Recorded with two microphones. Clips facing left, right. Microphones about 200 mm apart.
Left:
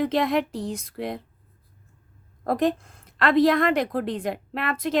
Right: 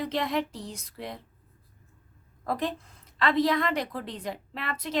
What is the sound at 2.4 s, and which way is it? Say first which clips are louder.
A woman's voice: left 8 dB; 45° left (ahead or behind).